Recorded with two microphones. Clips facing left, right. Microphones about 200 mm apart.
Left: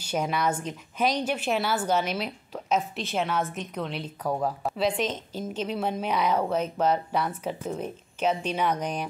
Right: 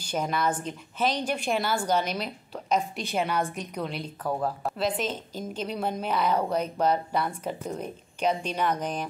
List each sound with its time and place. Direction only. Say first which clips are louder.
0.0 s a woman's voice: left 1 dB; 10° left (ahead or behind); by 5.4 s 5° right (ahead or behind)
6.1 s speech: even; 5° left (ahead or behind)